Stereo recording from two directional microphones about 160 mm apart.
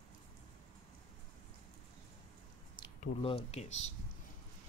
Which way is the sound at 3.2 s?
40° left (ahead or behind).